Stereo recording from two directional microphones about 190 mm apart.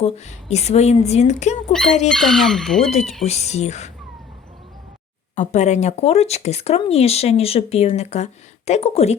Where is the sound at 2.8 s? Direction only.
35° left (ahead or behind).